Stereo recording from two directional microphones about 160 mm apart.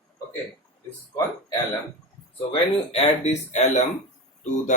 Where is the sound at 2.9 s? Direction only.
45° left (ahead or behind).